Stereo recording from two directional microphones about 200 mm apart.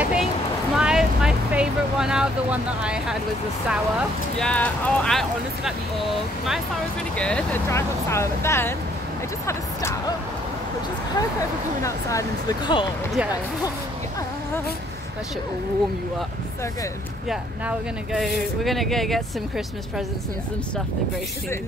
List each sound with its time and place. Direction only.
0.0 s a sound: 5° right (ahead or behind)
0.7 s vehicle: 5° right (ahead or behind)
4.4 s speech: 5° left (ahead or behind)
7.2 s speech: 5° left (ahead or behind)
11.8 s speech: 15° left (ahead or behind)
17.3 s speech: centre (ahead or behind)